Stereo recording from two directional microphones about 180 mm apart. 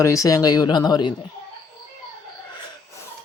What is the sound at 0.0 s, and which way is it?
Speech, 15° left (ahead or behind).